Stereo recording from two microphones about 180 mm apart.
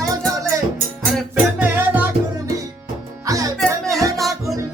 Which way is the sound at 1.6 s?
10° right (ahead or behind).